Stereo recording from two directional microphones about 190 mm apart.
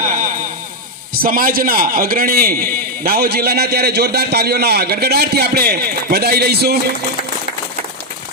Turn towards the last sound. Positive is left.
turn(degrees=-55)  # may be behind; listen again after turning